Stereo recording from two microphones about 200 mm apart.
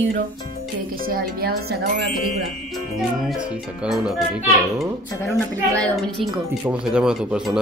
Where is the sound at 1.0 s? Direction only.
50° right (ahead or behind).